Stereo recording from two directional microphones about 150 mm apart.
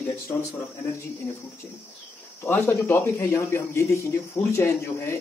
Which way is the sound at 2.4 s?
15° left (ahead or behind).